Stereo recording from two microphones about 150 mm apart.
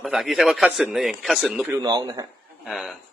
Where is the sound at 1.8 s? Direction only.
30° right (ahead or behind).